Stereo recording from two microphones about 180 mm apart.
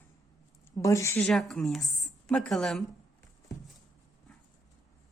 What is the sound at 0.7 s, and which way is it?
Speech, 15° left (ahead or behind).